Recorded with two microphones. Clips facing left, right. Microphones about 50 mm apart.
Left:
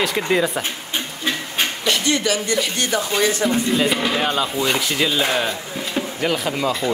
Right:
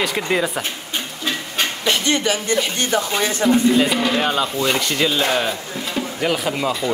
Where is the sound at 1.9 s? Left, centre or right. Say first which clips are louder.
Right 1 dB; right.